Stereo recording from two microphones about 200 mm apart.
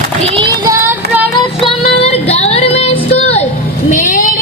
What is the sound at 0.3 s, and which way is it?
Child singing, 25° right (ahead or behind).